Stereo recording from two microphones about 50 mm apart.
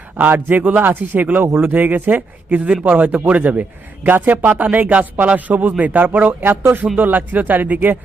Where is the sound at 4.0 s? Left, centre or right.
Right.